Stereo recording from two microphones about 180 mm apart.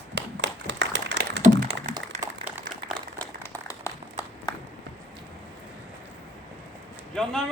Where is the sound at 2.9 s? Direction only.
10° left (ahead or behind).